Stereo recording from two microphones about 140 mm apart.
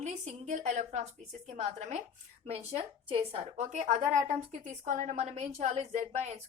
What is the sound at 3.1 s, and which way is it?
A woman's voice, 45° right (ahead or behind).